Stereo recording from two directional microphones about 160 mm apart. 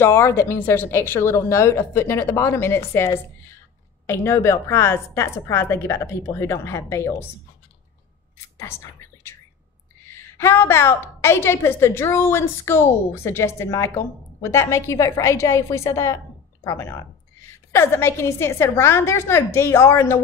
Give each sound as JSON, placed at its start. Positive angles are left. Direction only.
{"t": 0.0, "sound": "a woman's voice", "side_deg": 15}
{"t": 8.5, "sound": "a woman's voice", "side_deg": 15}